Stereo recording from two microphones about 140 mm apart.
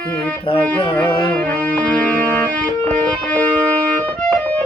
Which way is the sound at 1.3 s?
10° left (ahead or behind).